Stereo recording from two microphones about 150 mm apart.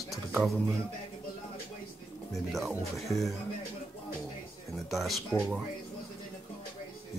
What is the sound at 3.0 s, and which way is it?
Speech, centre (ahead or behind).